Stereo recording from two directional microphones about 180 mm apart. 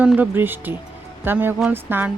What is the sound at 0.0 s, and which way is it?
A woman's voice, 10° right (ahead or behind).